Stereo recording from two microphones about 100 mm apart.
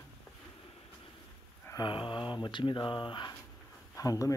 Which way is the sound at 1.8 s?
55° left (ahead or behind).